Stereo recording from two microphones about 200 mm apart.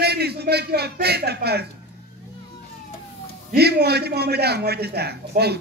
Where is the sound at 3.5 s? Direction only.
55° right (ahead or behind).